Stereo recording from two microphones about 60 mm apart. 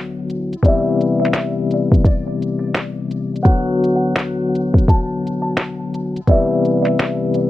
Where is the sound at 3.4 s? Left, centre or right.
Centre.